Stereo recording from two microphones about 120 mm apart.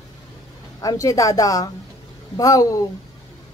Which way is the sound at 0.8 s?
30° left (ahead or behind).